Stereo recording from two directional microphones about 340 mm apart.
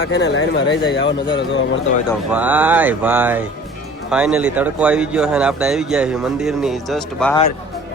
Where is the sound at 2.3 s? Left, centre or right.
Centre.